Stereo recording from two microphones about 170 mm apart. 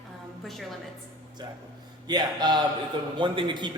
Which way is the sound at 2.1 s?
25° right (ahead or behind).